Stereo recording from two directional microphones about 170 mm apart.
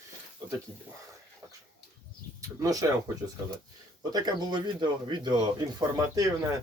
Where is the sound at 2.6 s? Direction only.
20° right (ahead or behind).